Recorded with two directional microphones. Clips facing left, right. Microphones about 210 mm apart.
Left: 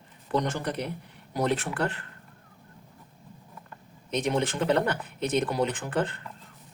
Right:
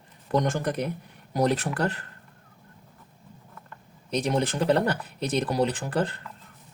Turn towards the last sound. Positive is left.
turn(degrees=-35)  # may be behind; listen again after turning